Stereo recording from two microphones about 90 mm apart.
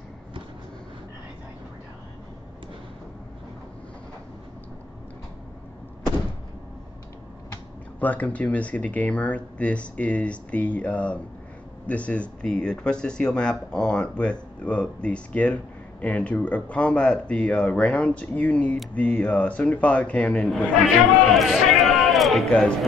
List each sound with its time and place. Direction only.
8.0 s speech: 15° left (ahead or behind)
20.4 s a man's voice: 5° left (ahead or behind)